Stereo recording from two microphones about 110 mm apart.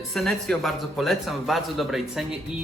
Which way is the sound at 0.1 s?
Centre (ahead or behind).